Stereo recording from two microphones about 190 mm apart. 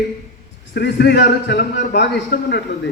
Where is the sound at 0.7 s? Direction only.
60° left (ahead or behind).